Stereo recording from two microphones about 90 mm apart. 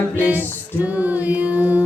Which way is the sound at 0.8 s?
15° right (ahead or behind).